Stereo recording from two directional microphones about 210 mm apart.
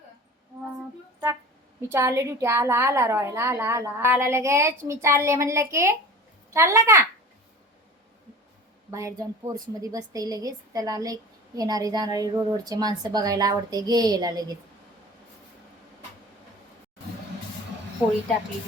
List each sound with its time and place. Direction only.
1.9 s a woman's voice: 15° right (ahead or behind)
8.9 s a woman's voice: 15° right (ahead or behind)